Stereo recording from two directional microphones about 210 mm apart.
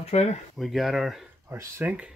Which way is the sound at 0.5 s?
Centre (ahead or behind).